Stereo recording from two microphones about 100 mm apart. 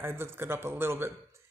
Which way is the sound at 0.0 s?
25° right (ahead or behind).